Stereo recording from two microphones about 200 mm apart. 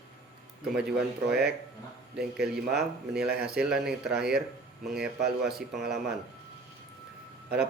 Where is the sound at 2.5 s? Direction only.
Centre (ahead or behind).